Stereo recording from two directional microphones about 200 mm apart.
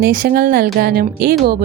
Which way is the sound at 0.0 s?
45° right (ahead or behind).